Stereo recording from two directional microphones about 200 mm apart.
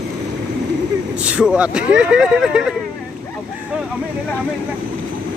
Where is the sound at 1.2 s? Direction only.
5° right (ahead or behind).